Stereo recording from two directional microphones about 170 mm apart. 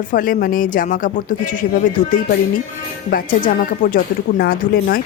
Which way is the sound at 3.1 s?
55° left (ahead or behind).